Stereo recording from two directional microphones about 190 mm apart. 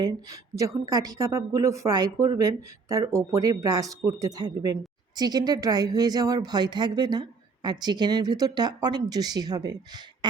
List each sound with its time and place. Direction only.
0.0 s a woman's voice: 20° right (ahead or behind)